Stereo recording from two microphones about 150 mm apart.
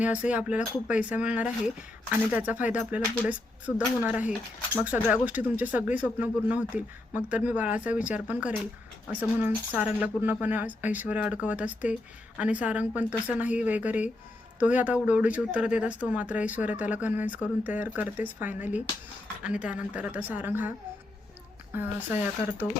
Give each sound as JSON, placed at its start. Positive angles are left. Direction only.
{"t": 0.0, "sound": "speech", "side_deg": -10}